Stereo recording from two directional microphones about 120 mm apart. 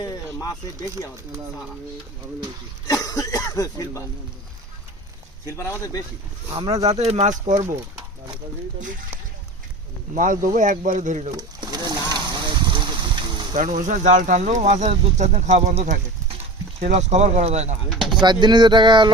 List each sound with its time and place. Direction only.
0.0 s a sound: 30° left (ahead or behind)
2.8 s speech: 30° left (ahead or behind)
5.5 s speech: 25° left (ahead or behind)
6.8 s speech: 60° right (ahead or behind); by 7.7 s 85° right
10.2 s speech: 90° right
11.3 s a sound: 35° right (ahead or behind)
13.6 s speech: 90° right; by 17.7 s 70° right (ahead or behind)
17.9 s speech: centre (ahead or behind)
18.2 s speech: 40° right (ahead or behind)